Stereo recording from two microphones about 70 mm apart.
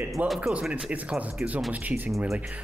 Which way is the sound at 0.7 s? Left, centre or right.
Centre.